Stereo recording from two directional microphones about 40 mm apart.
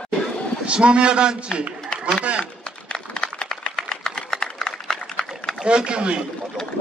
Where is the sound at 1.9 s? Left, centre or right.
Left.